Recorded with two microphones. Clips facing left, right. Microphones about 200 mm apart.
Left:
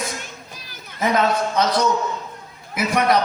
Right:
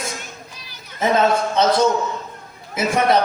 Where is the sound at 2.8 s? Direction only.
25° right (ahead or behind).